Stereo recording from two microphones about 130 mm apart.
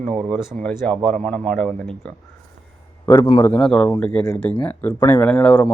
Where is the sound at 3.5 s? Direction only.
10° left (ahead or behind).